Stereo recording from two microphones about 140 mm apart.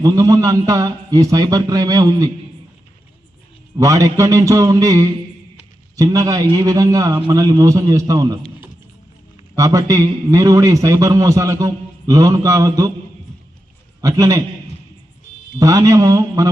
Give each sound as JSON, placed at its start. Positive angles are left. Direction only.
{"t": 0.0, "sound": "a man's voice", "side_deg": -25}
{"t": 3.8, "sound": "a man's voice", "side_deg": -25}
{"t": 9.6, "sound": "a man's voice", "side_deg": -25}
{"t": 14.0, "sound": "a man's voice", "side_deg": -25}
{"t": 15.5, "sound": "a man's voice", "side_deg": -25}